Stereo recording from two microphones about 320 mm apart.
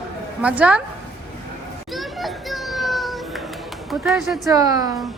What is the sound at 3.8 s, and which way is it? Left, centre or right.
A woman's voice, centre.